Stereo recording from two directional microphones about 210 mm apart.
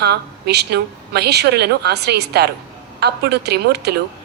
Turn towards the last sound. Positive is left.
turn(degrees=-50)  # may be behind; listen again after turning